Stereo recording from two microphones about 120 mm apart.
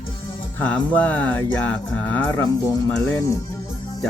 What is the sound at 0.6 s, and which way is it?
Speech, 10° left (ahead or behind).